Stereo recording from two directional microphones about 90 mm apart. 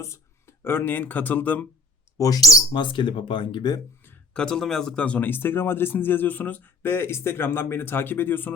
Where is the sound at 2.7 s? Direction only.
65° left (ahead or behind).